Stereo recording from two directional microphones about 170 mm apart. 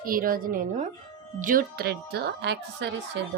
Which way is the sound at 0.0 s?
55° right (ahead or behind).